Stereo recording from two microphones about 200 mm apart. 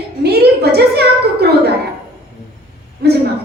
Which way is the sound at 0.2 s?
55° right (ahead or behind).